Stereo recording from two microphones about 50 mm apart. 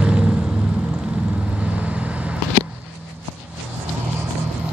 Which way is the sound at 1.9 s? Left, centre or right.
Right.